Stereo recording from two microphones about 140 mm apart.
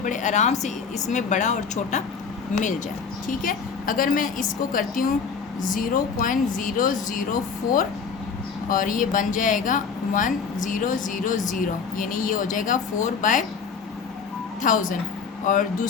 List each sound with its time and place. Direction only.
0.0 s speech: 65° left (ahead or behind)
3.2 s a woman's voice: 80° left
8.7 s speech: 70° left (ahead or behind)
14.6 s speech: 70° left (ahead or behind)